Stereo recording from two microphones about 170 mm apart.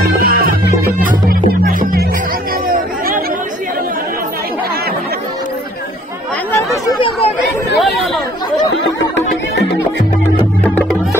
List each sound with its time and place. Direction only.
0.0 s music: 65° right (ahead or behind)
7.7 s chatter: centre (ahead or behind)
8.7 s music: 90° left
10.6 s music: 10° left (ahead or behind)